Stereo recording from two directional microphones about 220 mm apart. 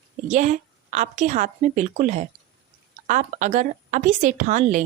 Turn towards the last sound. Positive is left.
turn(degrees=-35)  # may be behind; listen again after turning